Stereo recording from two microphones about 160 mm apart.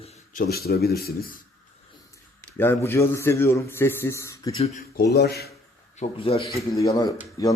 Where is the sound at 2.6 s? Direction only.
15° left (ahead or behind).